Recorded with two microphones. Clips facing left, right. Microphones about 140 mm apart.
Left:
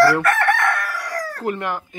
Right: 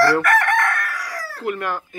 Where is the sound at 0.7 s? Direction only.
Centre (ahead or behind).